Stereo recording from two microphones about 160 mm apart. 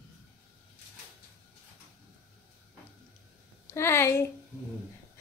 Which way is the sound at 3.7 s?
15° left (ahead or behind).